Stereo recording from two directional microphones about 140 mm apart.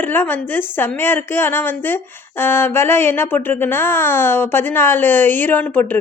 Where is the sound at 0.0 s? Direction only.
15° left (ahead or behind).